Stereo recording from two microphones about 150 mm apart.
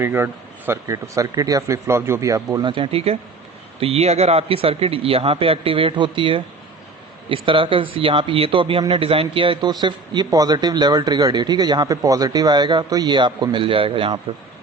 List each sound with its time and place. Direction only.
0.0 s a man's voice: 15° right (ahead or behind); by 6.4 s 35° right (ahead or behind)
7.4 s a man's voice: 35° right (ahead or behind)